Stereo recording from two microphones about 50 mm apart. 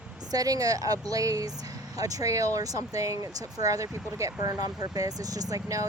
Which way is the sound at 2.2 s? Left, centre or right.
Right.